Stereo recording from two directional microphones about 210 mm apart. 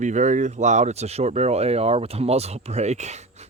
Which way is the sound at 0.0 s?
35° right (ahead or behind).